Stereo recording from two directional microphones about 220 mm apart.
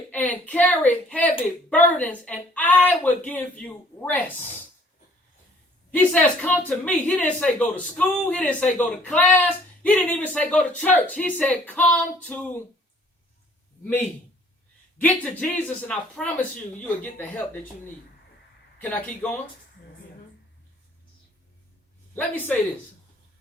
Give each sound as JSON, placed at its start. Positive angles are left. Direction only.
{"t": 0.1, "sound": "a woman's voice", "side_deg": 5}
{"t": 4.4, "sound": "speech", "side_deg": 30}
{"t": 5.9, "sound": "a woman's voice", "side_deg": 5}
{"t": 13.8, "sound": "a woman's voice", "side_deg": 10}
{"t": 18.8, "sound": "a woman's voice", "side_deg": 5}